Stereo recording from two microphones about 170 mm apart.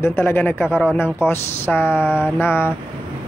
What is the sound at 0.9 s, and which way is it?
Speech, 15° left (ahead or behind).